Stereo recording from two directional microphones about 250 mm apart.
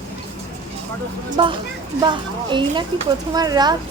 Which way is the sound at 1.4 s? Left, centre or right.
Centre.